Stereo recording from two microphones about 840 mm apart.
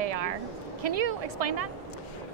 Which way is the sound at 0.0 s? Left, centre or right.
Right.